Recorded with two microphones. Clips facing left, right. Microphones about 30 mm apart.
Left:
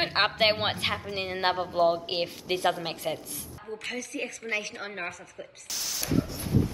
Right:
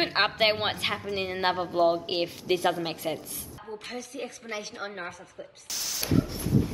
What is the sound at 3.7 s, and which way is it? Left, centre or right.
A woman's voice, left.